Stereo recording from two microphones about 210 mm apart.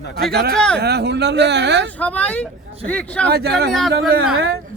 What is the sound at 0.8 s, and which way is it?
Speech, 50° right (ahead or behind).